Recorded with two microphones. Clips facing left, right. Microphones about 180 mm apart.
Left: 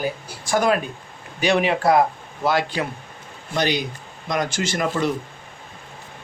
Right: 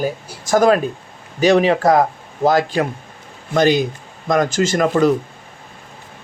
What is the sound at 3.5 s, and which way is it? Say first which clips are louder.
A man's voice: right 8 dB; 45° right (ahead or behind).